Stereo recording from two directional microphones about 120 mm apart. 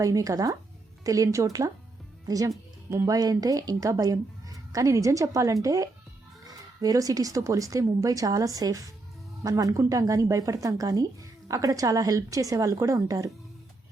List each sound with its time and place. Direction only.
0.0 s speech: 30° right (ahead or behind)